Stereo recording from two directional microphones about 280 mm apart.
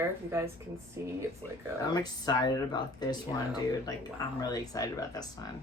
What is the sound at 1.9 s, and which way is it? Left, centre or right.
Speech, centre.